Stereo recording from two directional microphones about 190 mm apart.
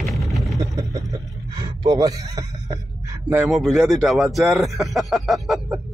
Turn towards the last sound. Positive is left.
turn(degrees=0)  # may be behind; listen again after turning